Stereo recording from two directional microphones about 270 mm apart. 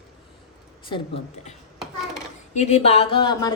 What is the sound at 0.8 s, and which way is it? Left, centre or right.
Speech, centre.